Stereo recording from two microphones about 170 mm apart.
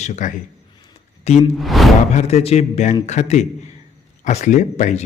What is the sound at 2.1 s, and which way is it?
A man's voice, 40° left (ahead or behind).